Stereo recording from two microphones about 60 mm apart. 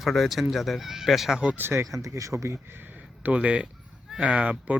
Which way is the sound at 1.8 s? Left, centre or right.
Right.